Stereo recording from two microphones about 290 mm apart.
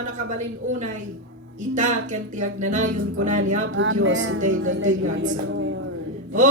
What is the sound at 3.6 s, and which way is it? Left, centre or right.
Speech, right.